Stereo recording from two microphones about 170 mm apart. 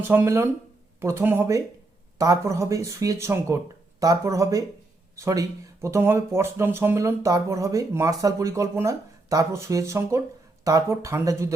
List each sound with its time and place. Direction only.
0.1 s speech: 15° right (ahead or behind)